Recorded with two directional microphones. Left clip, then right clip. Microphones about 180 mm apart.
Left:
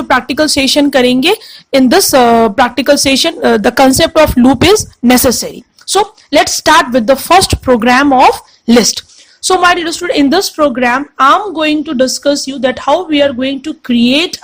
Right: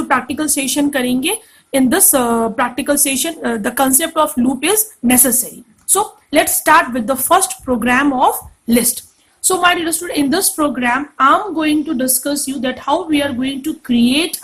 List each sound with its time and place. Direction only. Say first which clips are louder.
0.1 s a woman's voice: left 8 dB; 45° left (ahead or behind)